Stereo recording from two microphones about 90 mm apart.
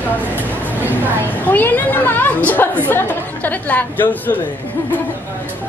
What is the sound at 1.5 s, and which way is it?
A woman's voice, 20° left (ahead or behind).